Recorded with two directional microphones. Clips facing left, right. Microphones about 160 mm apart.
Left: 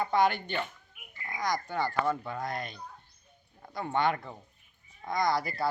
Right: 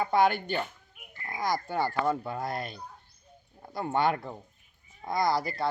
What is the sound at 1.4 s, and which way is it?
Speech, 5° right (ahead or behind).